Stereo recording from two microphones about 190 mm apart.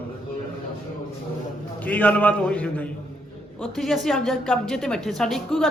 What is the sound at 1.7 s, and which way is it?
A man's voice, 10° left (ahead or behind).